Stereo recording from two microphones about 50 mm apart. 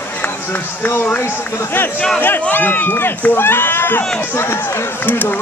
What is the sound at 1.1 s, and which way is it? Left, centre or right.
Speech, left.